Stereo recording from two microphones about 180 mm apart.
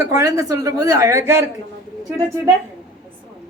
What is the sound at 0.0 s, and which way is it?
Speech, 20° right (ahead or behind).